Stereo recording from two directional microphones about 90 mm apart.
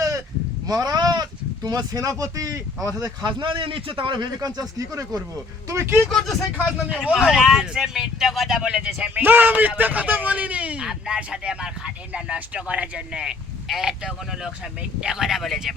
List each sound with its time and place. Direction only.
0.7 s speech: 45° right (ahead or behind)
3.4 s a man's voice: 70° right (ahead or behind)
4.4 s speech: 45° right (ahead or behind)
6.1 s speech: 5° left (ahead or behind)
6.7 s speech: 10° right (ahead or behind)